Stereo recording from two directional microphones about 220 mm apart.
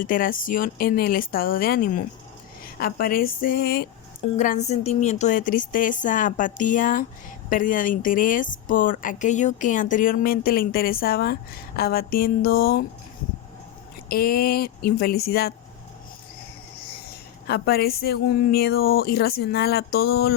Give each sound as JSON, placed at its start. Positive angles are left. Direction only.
{"t": 0.0, "sound": "a woman's voice", "side_deg": 40}
{"t": 4.4, "sound": "a woman's voice", "side_deg": 35}
{"t": 14.1, "sound": "a woman's voice", "side_deg": 45}
{"t": 17.5, "sound": "a woman's voice", "side_deg": 45}